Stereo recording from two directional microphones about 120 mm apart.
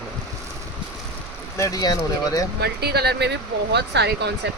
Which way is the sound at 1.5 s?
30° left (ahead or behind).